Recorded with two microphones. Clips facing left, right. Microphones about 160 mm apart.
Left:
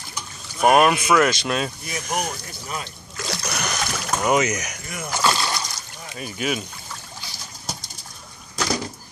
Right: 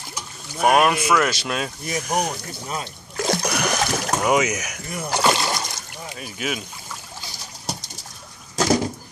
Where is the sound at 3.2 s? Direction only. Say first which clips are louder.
Right 8 dB; 50° right (ahead or behind).